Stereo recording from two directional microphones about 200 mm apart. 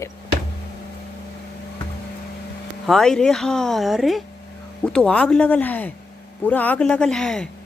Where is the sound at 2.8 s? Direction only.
Centre (ahead or behind).